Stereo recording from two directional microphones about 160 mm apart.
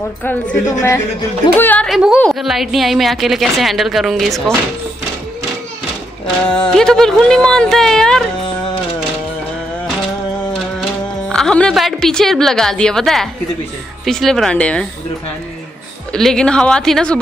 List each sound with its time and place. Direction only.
0.2 s a woman's voice: 10° left (ahead or behind)
0.7 s speech: 20° left (ahead or behind)
1.6 s a woman's voice: 10° left (ahead or behind)
1.9 s a woman's voice: 5° right (ahead or behind)
6.7 s a woman's voice: 5° left (ahead or behind)
11.2 s a woman's voice: 5° left (ahead or behind)
16.1 s a woman's voice: 5° left (ahead or behind)